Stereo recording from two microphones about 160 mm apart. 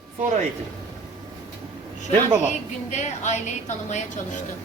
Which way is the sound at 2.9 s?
45° left (ahead or behind).